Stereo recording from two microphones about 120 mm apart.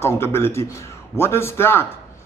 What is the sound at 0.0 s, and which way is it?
A man's voice, 20° left (ahead or behind).